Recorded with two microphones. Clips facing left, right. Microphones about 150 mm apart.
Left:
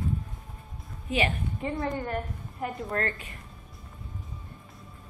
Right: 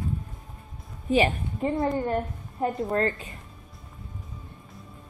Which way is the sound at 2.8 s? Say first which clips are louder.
Right 4 dB; 25° right (ahead or behind).